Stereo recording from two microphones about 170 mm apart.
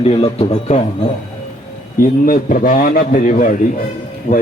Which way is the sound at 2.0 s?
55° left (ahead or behind).